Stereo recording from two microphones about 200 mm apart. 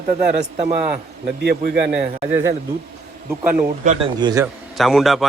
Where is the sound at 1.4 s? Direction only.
55° right (ahead or behind).